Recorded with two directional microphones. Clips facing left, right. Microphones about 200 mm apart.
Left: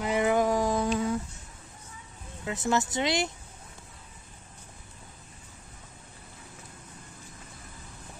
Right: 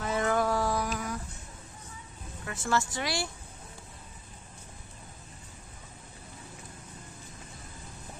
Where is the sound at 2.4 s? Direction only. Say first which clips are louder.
Left 3 dB; 20° left (ahead or behind).